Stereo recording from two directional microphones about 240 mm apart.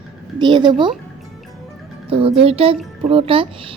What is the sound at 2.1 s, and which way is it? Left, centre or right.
Speech, right.